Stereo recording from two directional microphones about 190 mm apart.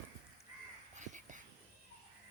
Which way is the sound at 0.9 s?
40° right (ahead or behind).